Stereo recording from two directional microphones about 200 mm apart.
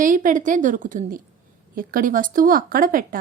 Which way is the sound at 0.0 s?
40° right (ahead or behind).